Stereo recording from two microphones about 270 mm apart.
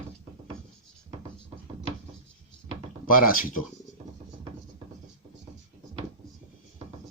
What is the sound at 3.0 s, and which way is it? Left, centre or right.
Speech, left.